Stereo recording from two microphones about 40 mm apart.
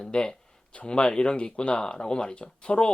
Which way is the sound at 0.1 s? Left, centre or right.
Left.